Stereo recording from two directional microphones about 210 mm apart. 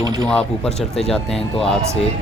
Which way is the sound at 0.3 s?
5° left (ahead or behind).